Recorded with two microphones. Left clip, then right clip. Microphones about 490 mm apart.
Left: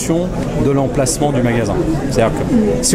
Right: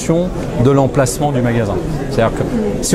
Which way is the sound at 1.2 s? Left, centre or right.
Centre.